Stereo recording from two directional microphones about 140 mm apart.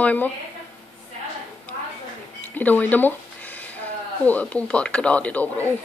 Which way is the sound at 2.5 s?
10° left (ahead or behind).